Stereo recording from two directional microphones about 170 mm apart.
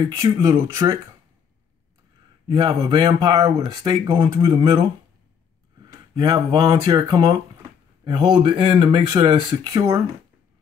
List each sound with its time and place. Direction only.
0.0 s speech: 20° right (ahead or behind)
2.4 s speech: 25° right (ahead or behind)
6.1 s speech: 25° right (ahead or behind)